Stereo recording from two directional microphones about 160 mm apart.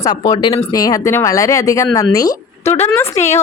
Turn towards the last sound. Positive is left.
turn(degrees=45)  # may be behind; listen again after turning